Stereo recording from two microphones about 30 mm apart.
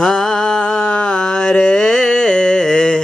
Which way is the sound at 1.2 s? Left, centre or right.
Left.